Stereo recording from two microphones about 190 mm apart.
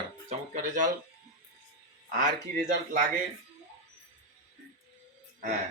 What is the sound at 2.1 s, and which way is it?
Speech, 45° right (ahead or behind).